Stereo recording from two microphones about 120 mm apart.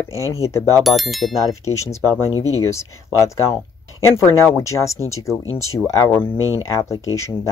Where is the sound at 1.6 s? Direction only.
25° left (ahead or behind).